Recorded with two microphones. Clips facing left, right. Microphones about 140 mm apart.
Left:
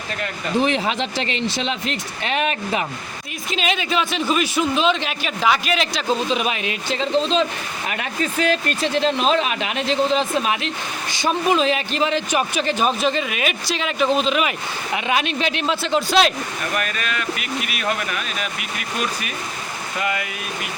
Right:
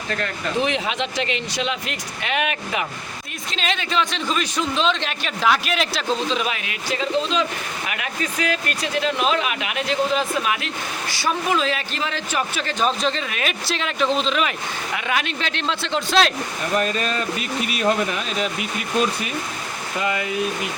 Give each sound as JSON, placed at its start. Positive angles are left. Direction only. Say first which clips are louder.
{"t": 0.6, "sound": "speech", "louder": "left 3 dB", "side_deg": 35}
{"t": 3.5, "sound": "a man's voice", "louder": "left 2 dB", "side_deg": 10}
{"t": 6.2, "sound": "a man's voice", "louder": "left 2 dB", "side_deg": 15}
{"t": 14.9, "sound": "a man's voice", "louder": "left 4 dB", "side_deg": 20}
{"t": 16.7, "sound": "speech", "louder": "right 5 dB", "side_deg": -30}